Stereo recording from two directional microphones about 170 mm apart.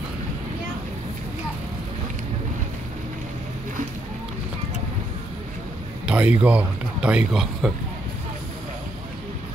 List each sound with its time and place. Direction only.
6.0 s speech: 10° right (ahead or behind)